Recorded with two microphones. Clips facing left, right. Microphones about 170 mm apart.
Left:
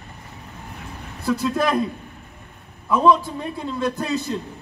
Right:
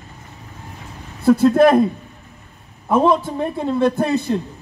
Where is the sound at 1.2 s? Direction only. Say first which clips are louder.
Right 10 dB; 55° right (ahead or behind).